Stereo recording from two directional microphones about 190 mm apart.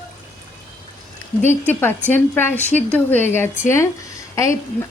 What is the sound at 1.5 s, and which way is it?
A woman's voice, 10° left (ahead or behind).